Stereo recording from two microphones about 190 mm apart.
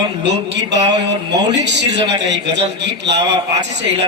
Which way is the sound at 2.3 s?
65° right (ahead or behind).